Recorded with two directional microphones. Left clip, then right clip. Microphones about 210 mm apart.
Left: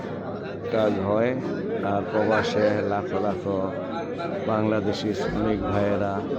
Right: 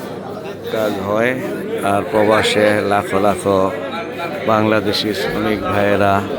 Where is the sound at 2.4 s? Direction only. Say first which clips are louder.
Right 9 dB; 10° right (ahead or behind).